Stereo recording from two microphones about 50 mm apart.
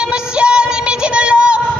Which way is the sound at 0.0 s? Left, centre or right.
Centre.